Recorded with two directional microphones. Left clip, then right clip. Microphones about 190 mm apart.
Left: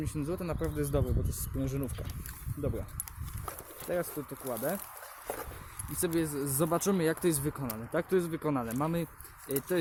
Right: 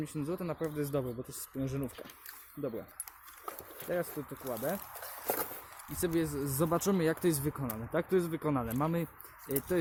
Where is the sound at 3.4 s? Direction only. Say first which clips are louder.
Left 1 dB; 20° left (ahead or behind).